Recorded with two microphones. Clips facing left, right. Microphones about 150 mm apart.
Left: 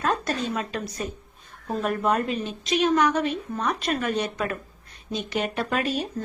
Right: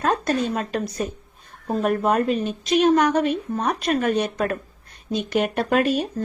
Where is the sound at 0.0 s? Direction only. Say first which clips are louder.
Right 4 dB; 55° right (ahead or behind).